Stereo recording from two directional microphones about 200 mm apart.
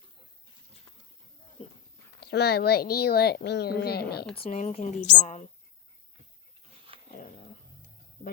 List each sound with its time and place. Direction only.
2.2 s speech: 55° left (ahead or behind)
4.4 s speech: 35° left (ahead or behind)
6.9 s dog: 30° right (ahead or behind)